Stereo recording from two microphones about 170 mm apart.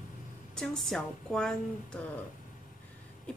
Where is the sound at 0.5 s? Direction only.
Centre (ahead or behind).